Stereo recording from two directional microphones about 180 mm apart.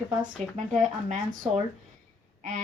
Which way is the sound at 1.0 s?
40° right (ahead or behind).